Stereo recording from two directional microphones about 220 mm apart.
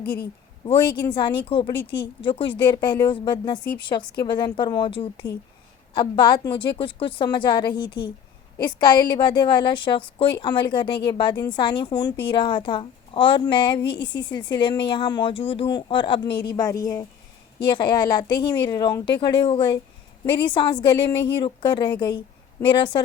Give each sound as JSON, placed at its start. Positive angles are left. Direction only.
{"t": 0.0, "sound": "a woman's voice", "side_deg": 45}
{"t": 0.6, "sound": "a woman's voice", "side_deg": 25}